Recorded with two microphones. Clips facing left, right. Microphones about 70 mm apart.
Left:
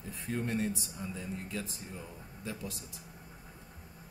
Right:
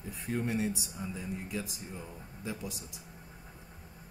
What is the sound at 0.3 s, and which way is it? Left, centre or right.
Speech, centre.